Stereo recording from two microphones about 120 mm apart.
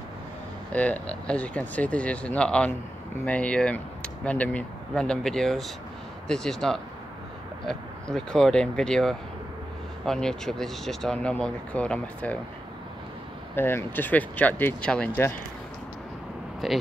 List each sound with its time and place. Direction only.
0.7 s speech: 10° left (ahead or behind)
13.6 s speech: 20° left (ahead or behind)
16.6 s speech: centre (ahead or behind)